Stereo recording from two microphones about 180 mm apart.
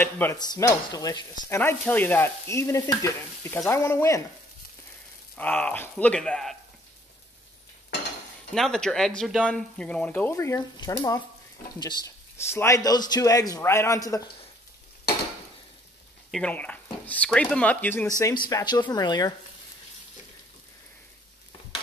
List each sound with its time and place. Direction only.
0.0 s sizzle: 15° left (ahead or behind)
5.4 s sizzle: 10° left (ahead or behind)
8.5 s sizzle: 5° left (ahead or behind)
16.3 s sizzle: 5° left (ahead or behind)
18.5 s speech: 20° left (ahead or behind)